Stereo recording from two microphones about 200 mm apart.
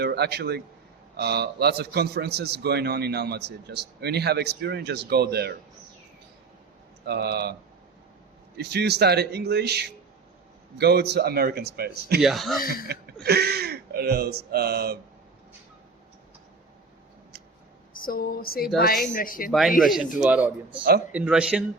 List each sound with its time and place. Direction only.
0.0 s a man's voice: 55° right (ahead or behind)
7.1 s speech: 55° right (ahead or behind)
8.5 s a man's voice: 55° right (ahead or behind)
12.2 s speech: centre (ahead or behind)
12.6 s a sound: 50° left (ahead or behind)
13.2 s speech: 55° right (ahead or behind)
17.9 s a sound: 45° left (ahead or behind)
19.5 s a man's voice: centre (ahead or behind)